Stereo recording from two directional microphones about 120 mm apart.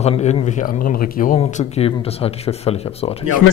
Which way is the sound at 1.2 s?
90° left.